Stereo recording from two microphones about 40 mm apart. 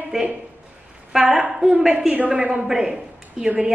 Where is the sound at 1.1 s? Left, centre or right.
Centre.